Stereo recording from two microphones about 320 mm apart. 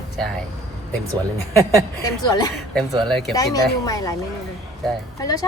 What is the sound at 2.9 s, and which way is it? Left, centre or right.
Speech, centre.